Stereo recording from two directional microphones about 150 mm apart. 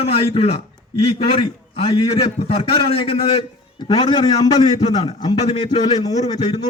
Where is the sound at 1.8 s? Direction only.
40° left (ahead or behind).